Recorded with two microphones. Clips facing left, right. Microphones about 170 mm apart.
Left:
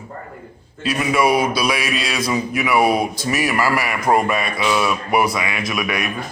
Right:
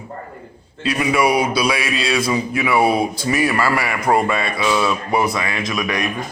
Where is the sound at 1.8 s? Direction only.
25° right (ahead or behind).